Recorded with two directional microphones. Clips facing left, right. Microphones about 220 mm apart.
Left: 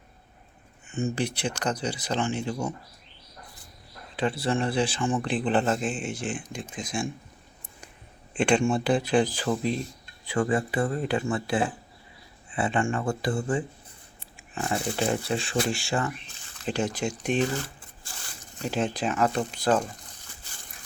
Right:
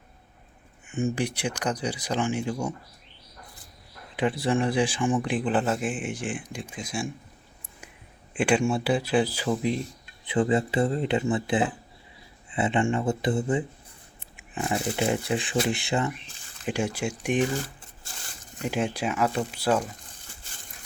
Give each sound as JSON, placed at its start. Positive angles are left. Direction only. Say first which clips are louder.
{"t": 0.9, "sound": "speech", "louder": "right 1 dB", "side_deg": -15}
{"t": 4.2, "sound": "speech", "louder": "right 2 dB", "side_deg": -15}
{"t": 8.3, "sound": "speech", "louder": "even", "side_deg": -10}
{"t": 14.3, "sound": "a sound", "louder": "right 1 dB", "side_deg": -20}
{"t": 14.8, "sound": "speech", "louder": "right 1 dB", "side_deg": -15}
{"t": 18.6, "sound": "speech", "louder": "even", "side_deg": -10}